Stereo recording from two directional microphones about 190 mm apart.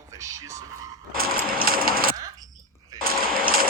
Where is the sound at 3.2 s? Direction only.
50° right (ahead or behind).